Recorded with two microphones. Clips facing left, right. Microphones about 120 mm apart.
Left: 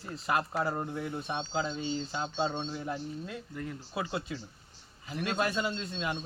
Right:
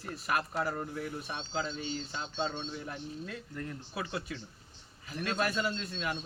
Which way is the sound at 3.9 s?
25° left (ahead or behind).